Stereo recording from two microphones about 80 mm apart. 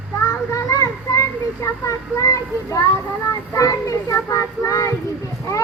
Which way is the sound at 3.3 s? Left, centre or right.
Left.